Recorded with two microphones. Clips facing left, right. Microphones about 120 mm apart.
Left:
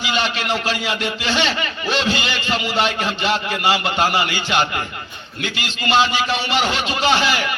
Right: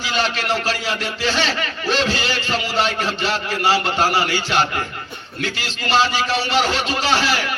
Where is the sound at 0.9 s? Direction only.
40° right (ahead or behind).